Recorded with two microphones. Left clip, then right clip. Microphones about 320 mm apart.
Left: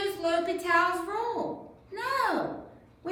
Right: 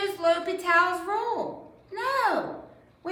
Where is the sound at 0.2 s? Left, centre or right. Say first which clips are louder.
Right 5 dB; centre.